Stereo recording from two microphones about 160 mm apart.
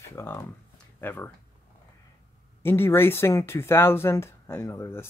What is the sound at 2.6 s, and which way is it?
Speech, 15° left (ahead or behind).